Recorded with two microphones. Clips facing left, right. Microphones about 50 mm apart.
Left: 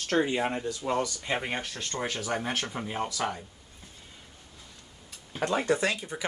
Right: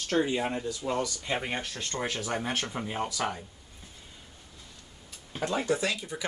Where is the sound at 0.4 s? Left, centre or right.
Left.